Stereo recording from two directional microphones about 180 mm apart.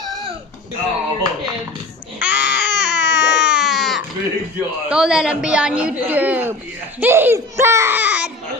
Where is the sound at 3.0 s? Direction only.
80° left.